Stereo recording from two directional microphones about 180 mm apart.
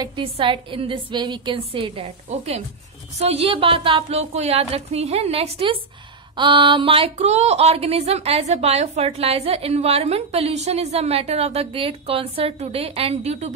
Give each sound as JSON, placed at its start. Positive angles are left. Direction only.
{"t": 0.0, "sound": "a woman's voice", "side_deg": -25}